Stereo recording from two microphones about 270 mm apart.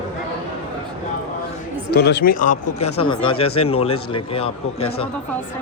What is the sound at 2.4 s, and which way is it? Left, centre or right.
Speech, left.